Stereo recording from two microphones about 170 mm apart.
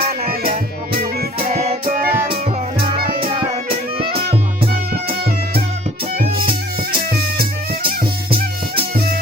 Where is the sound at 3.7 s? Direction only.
35° right (ahead or behind).